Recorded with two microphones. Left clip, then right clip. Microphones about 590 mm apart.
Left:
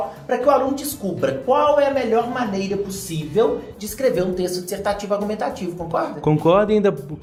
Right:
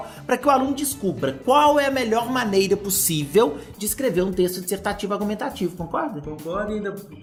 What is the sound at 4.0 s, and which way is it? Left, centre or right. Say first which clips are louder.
A woman's voice: left 2 dB; centre.